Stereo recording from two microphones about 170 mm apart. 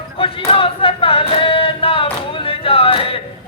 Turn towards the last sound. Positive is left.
turn(degrees=30)  # may be behind; listen again after turning